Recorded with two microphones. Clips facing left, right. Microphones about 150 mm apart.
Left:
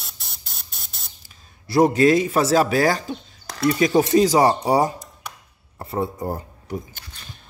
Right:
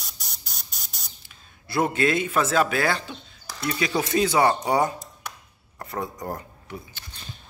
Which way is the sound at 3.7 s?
40° left (ahead or behind).